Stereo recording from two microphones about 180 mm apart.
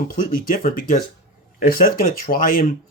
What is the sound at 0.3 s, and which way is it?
Speech, 50° left (ahead or behind).